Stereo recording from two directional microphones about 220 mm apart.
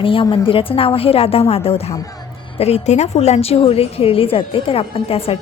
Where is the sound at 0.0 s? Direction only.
25° left (ahead or behind).